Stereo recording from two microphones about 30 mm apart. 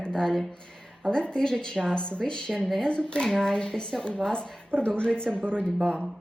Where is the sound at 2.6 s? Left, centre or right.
Centre.